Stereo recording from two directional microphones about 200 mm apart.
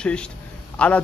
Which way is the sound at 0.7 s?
5° left (ahead or behind).